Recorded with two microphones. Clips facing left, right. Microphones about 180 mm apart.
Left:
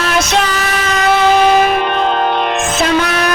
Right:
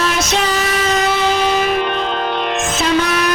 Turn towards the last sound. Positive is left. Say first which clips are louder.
# left 2 dB
turn(degrees=65)  # may be behind; listen again after turning